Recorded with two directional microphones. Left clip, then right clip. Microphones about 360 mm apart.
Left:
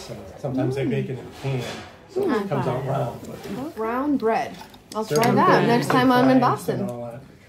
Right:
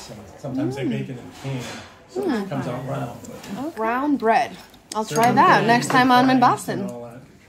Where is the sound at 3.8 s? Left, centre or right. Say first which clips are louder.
Right 2 dB; right.